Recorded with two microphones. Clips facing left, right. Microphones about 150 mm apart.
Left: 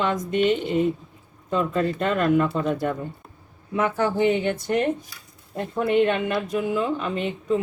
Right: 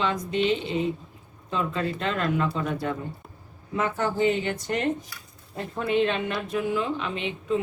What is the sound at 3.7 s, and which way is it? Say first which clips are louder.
Speech: left 3 dB; 60° left (ahead or behind).